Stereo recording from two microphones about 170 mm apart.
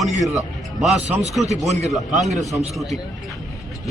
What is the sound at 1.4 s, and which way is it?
Speech, 40° right (ahead or behind).